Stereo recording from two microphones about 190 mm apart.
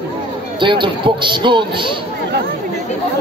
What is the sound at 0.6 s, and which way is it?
Speech, 25° right (ahead or behind).